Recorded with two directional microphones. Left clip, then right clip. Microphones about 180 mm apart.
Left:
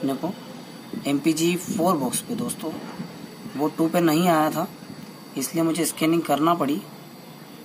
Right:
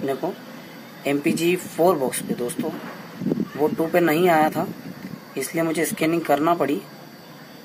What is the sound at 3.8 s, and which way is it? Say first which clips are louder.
Speech: right 1 dB; 15° right (ahead or behind).